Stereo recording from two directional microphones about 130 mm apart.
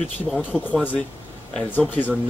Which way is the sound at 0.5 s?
5° right (ahead or behind).